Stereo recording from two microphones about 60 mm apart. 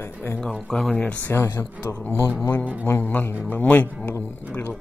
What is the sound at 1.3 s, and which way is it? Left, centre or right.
Speech, left.